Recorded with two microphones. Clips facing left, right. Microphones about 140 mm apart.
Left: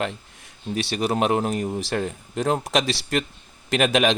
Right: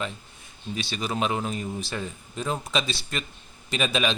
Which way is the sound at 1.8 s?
80° left.